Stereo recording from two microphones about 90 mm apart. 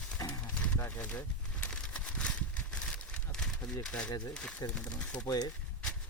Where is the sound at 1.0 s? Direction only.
15° left (ahead or behind).